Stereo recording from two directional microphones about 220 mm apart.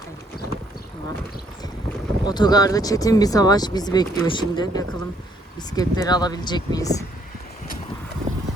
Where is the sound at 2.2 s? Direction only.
20° left (ahead or behind).